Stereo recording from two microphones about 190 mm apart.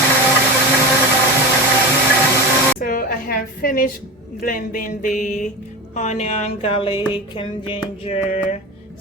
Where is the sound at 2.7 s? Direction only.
45° left (ahead or behind).